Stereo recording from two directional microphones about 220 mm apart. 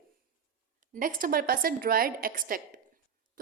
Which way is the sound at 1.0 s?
40° right (ahead or behind).